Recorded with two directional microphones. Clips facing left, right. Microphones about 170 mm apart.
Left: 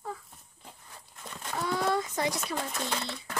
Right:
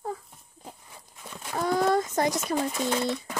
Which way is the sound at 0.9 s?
10° right (ahead or behind).